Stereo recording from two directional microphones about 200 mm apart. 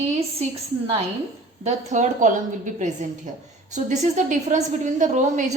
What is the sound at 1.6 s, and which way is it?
A woman's voice, 35° right (ahead or behind).